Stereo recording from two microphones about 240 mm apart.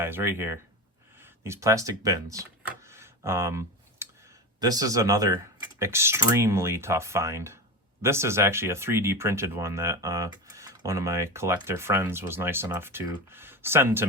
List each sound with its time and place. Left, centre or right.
0.0 s speech: centre
2.3 s computer keyboard: centre
4.6 s speech: centre